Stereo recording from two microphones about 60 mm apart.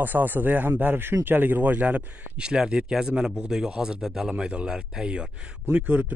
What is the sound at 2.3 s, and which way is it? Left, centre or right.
Speech, centre.